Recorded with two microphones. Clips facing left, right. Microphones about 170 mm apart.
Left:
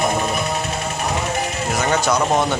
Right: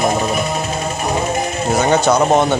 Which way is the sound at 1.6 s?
30° right (ahead or behind).